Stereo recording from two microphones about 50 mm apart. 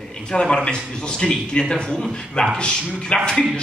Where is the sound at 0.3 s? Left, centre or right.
Centre.